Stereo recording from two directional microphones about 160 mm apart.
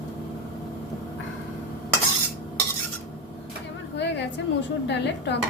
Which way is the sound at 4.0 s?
90° left.